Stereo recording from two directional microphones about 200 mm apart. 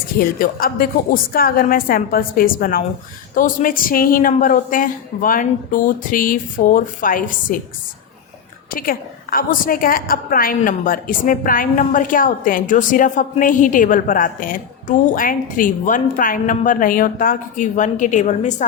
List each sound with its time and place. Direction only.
0.2 s a woman's voice: 45° left (ahead or behind)
8.7 s a woman's voice: 45° left (ahead or behind)